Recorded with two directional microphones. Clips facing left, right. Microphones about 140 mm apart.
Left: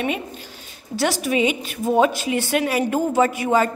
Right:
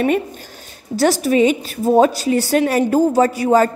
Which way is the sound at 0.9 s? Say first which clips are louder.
Right 6 dB; 40° right (ahead or behind).